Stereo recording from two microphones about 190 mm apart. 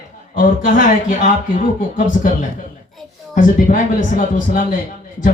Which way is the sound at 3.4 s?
45° left (ahead or behind).